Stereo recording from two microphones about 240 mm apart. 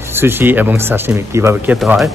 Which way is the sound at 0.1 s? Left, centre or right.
Centre.